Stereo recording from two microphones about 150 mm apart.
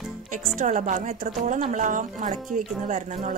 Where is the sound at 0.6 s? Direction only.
55° right (ahead or behind).